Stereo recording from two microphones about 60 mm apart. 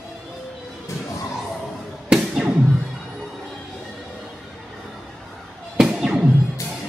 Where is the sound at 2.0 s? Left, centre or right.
Centre.